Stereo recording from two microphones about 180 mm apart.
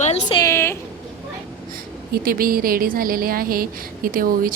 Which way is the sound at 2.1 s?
55° right (ahead or behind).